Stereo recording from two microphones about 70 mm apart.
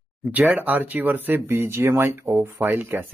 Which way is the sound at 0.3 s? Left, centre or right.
Right.